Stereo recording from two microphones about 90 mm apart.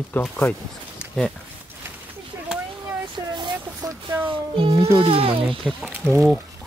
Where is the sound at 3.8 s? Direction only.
40° right (ahead or behind).